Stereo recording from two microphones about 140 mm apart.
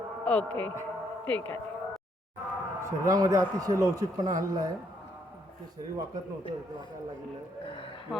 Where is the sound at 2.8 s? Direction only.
25° right (ahead or behind).